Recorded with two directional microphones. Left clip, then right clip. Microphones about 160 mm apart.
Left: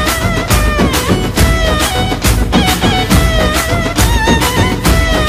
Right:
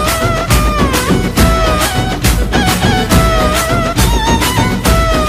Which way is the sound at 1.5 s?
Centre (ahead or behind).